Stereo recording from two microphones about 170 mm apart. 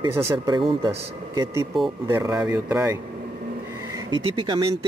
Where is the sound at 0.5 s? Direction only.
30° right (ahead or behind).